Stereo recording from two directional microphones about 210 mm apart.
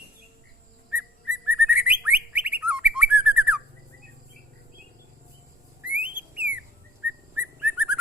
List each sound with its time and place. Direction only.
0.9 s bird: 5° right (ahead or behind)
5.8 s whistling: 5° right (ahead or behind)
7.0 s bird: 5° right (ahead or behind)